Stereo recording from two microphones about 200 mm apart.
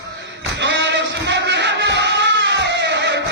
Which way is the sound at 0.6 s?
60° right (ahead or behind).